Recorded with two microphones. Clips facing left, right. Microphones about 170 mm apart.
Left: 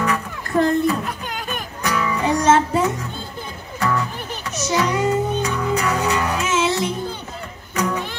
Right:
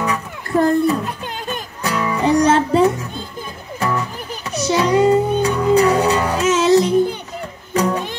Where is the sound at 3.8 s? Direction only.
20° right (ahead or behind); by 6.9 s 40° right (ahead or behind).